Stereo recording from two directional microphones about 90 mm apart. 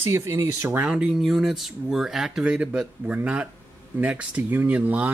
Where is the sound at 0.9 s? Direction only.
10° right (ahead or behind).